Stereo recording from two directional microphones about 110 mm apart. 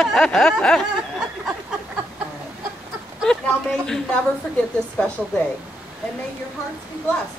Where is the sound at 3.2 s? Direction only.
5° left (ahead or behind).